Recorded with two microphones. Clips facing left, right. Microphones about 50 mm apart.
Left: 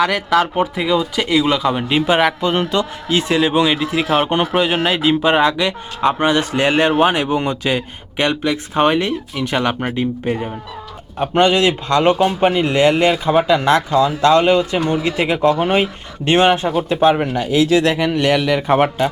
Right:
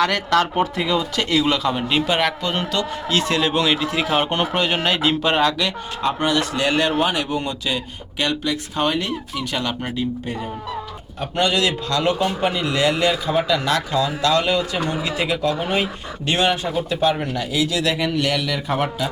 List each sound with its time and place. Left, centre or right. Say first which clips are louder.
0.0 s a man's voice: left 3 dB; centre; by 18.6 s left
18.7 s speech: left 8 dB; left